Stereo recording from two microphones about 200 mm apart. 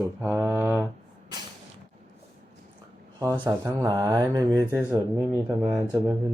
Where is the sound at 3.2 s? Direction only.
15° right (ahead or behind).